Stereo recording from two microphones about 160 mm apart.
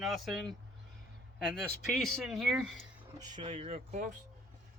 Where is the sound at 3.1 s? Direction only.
25° right (ahead or behind); by 4.2 s 50° right (ahead or behind).